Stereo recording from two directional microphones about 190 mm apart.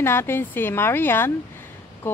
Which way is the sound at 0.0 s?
10° left (ahead or behind).